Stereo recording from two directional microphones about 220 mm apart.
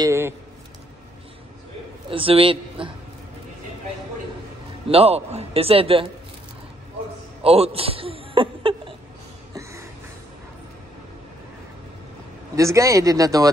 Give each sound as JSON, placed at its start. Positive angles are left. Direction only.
{"t": 0.0, "sound": "a sound", "side_deg": -10}
{"t": 2.0, "sound": "a man's voice", "side_deg": -25}
{"t": 4.8, "sound": "a man's voice", "side_deg": -25}
{"t": 7.4, "sound": "a man's voice", "side_deg": -25}
{"t": 9.5, "sound": "a sound", "side_deg": -15}
{"t": 12.5, "sound": "speech", "side_deg": -15}